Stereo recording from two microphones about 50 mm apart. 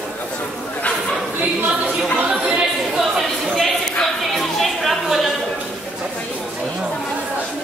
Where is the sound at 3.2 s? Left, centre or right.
Centre.